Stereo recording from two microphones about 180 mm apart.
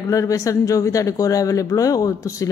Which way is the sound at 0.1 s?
15° left (ahead or behind).